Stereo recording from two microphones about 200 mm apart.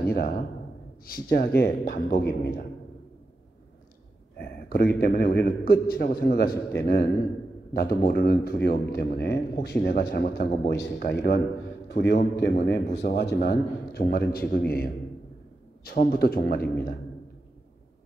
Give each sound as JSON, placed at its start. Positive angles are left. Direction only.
{"t": 0.0, "sound": "speech", "side_deg": 50}
{"t": 4.4, "sound": "a man's voice", "side_deg": 50}
{"t": 15.8, "sound": "speech", "side_deg": 50}